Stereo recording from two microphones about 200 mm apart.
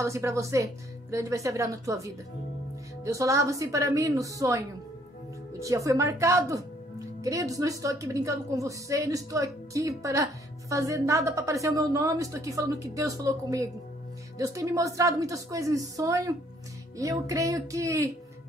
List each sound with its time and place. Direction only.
0.0 s a woman's voice: 15° right (ahead or behind)